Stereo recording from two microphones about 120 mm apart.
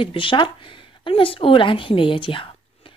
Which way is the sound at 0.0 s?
45° left (ahead or behind).